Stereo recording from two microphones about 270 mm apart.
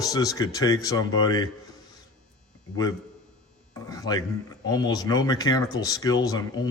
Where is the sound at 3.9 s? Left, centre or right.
Centre.